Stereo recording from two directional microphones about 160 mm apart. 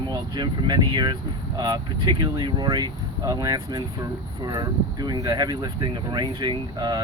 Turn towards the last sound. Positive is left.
turn(degrees=-25)  # may be behind; listen again after turning